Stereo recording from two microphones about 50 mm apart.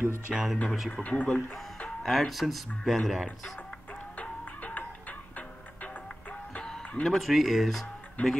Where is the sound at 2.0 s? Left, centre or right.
Centre.